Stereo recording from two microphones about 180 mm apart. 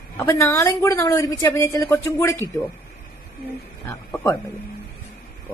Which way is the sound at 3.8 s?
15° left (ahead or behind).